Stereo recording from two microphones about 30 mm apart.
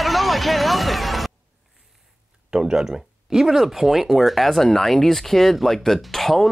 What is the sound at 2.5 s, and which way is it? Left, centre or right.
Speech, centre.